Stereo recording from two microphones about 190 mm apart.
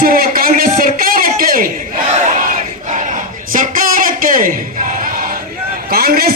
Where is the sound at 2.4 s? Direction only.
40° right (ahead or behind).